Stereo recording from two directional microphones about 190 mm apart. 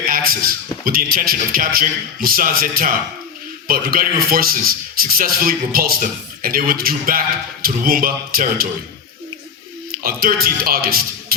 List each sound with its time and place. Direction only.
0.1 s speech: 50° right (ahead or behind)
9.9 s a man's voice: 50° right (ahead or behind)